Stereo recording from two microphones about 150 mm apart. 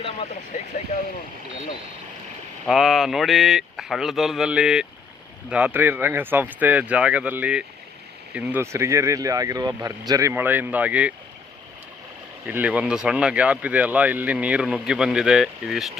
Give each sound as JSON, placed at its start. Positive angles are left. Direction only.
{"t": 0.9, "sound": "speech", "side_deg": 55}
{"t": 2.6, "sound": "speech", "side_deg": 0}
{"t": 12.5, "sound": "speech", "side_deg": -10}